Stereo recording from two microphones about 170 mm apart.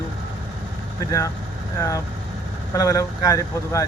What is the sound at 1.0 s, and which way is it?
Speech, 20° left (ahead or behind).